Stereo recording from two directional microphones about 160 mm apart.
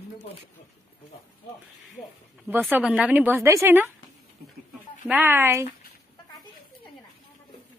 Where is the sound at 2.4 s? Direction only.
10° right (ahead or behind).